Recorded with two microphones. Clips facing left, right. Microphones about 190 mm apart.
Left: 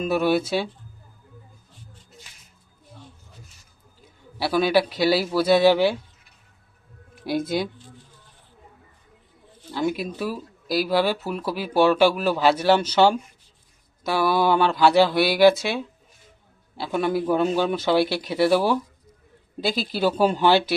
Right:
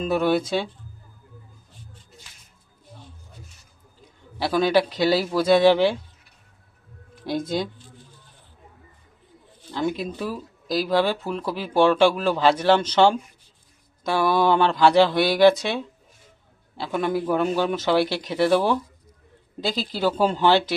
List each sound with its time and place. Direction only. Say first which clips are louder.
0.0 s speech: even; 10° left (ahead or behind)
4.5 s speech: even; 10° left (ahead or behind)
4.9 s speech: even; 20° right (ahead or behind)
5.1 s speech: right 1 dB; 10° left (ahead or behind)
7.3 s speech: left 1 dB; 10° left (ahead or behind)
10.0 s speech: left 1 dB; 10° left (ahead or behind)